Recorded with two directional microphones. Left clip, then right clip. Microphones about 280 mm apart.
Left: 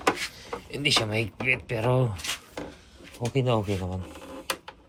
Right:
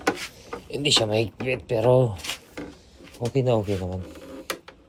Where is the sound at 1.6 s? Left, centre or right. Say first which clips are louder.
Right 7 dB; centre.